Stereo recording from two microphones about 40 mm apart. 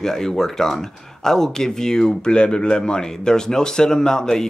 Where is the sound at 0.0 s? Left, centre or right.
Centre.